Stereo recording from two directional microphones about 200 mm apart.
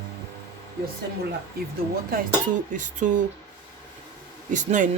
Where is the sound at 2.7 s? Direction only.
40° right (ahead or behind).